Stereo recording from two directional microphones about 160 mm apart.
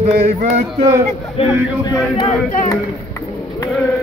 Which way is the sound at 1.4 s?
40° left (ahead or behind).